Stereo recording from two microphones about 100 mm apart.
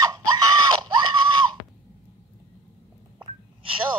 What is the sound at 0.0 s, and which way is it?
Screaming, 40° right (ahead or behind).